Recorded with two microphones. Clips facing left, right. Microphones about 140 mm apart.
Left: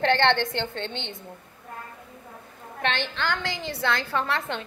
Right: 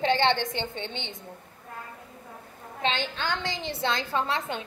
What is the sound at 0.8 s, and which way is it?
Speech, 15° right (ahead or behind).